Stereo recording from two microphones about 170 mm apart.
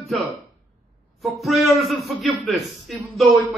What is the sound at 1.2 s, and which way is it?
A man's voice, centre (ahead or behind).